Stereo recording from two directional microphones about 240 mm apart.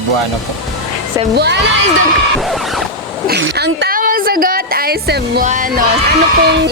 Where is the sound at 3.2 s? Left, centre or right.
Right.